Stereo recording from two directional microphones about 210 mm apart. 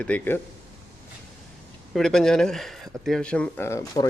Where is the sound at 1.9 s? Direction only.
Centre (ahead or behind).